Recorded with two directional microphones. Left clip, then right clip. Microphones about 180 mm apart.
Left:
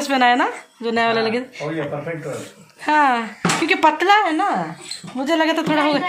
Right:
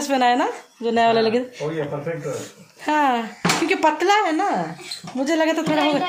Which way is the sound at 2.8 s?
15° right (ahead or behind).